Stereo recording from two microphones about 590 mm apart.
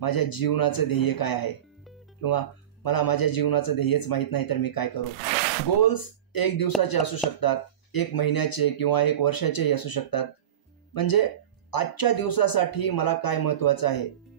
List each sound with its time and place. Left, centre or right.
0.0 s speech: left